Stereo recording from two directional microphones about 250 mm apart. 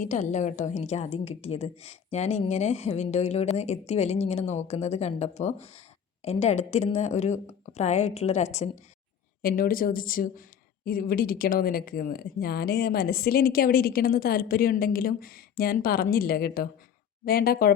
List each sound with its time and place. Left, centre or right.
0.0 s a woman's voice: left